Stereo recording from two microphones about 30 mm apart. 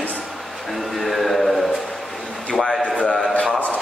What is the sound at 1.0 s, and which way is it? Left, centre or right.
Speech, centre.